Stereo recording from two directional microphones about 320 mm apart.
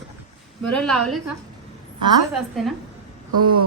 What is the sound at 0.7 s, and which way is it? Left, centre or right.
Speech, centre.